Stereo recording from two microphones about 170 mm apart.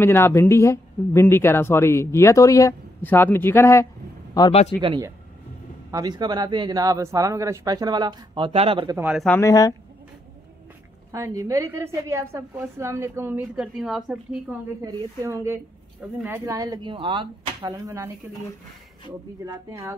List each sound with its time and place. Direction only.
0.0 s a man's voice: 15° left (ahead or behind)
5.9 s speech: 20° right (ahead or behind)
8.8 s a woman's voice: 10° right (ahead or behind)
9.3 s speech: 20° left (ahead or behind)
11.1 s a woman's voice: 20° right (ahead or behind); by 14.4 s centre (ahead or behind)
14.8 s a woman's voice: 20° right (ahead or behind)
19.4 s a woman's voice: 15° right (ahead or behind)